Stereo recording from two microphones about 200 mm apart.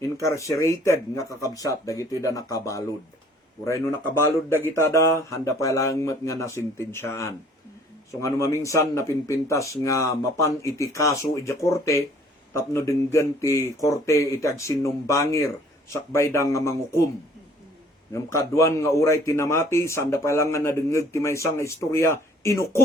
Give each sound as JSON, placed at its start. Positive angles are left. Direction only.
{"t": 0.0, "sound": "a man's voice", "side_deg": 15}
{"t": 18.1, "sound": "a man's voice", "side_deg": 15}